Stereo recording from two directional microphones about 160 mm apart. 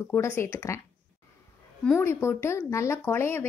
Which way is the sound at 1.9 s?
15° left (ahead or behind).